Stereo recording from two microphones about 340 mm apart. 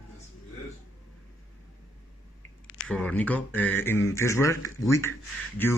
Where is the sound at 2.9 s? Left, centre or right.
Centre.